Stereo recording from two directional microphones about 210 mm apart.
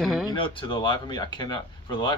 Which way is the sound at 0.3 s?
25° left (ahead or behind).